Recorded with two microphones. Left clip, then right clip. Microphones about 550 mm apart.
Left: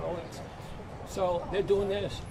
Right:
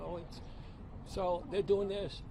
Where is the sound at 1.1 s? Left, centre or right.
Right.